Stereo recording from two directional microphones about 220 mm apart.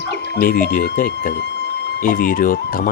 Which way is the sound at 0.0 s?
50° left (ahead or behind).